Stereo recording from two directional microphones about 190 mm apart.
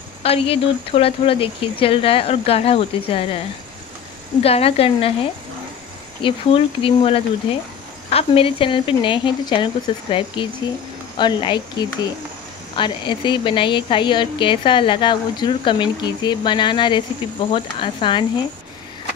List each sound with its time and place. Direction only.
0.2 s a woman's voice: 30° left (ahead or behind)
4.4 s a woman's voice: 30° left (ahead or behind)
6.2 s a woman's voice: 25° left (ahead or behind)